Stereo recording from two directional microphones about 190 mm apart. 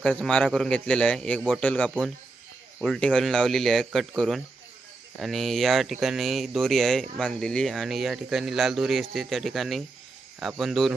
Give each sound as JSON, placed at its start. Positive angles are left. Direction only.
{"t": 0.0, "sound": "speech", "side_deg": 5}